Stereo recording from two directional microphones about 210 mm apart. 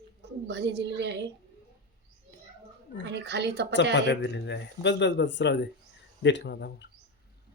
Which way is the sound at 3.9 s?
55° left (ahead or behind).